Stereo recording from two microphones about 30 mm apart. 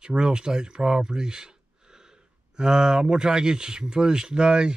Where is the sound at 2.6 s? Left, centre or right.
Right.